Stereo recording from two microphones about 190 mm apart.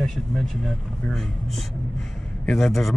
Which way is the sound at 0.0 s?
Centre (ahead or behind).